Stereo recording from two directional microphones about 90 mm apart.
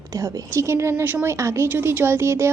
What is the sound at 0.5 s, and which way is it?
A woman's voice, 30° right (ahead or behind).